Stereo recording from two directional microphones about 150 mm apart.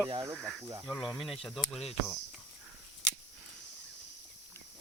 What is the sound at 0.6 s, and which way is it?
Speech, 20° right (ahead or behind).